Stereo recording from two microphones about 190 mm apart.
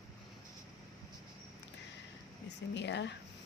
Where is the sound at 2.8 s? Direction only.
65° left (ahead or behind).